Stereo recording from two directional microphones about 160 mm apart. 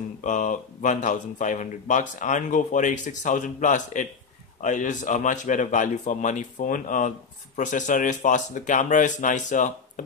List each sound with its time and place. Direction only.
0.2 s speech: 55° left (ahead or behind)